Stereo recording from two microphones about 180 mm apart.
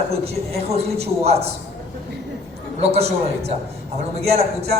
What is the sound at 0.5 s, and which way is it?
Speech, 35° right (ahead or behind).